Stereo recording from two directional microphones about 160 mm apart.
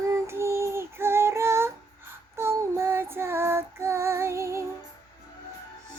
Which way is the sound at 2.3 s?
15° right (ahead or behind).